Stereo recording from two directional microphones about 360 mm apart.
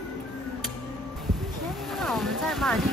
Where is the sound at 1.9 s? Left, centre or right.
Centre.